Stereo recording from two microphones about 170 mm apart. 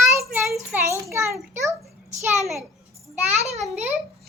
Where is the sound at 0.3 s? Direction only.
5° right (ahead or behind).